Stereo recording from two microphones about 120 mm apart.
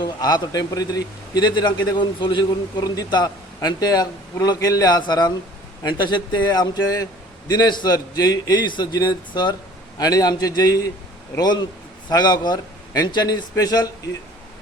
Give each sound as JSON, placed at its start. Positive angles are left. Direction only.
{"t": 0.0, "sound": "a man's voice", "side_deg": 35}